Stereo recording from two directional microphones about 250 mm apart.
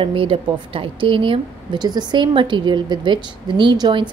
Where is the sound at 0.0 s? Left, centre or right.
Right.